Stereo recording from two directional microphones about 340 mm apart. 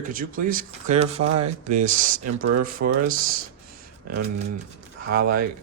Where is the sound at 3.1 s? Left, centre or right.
Right.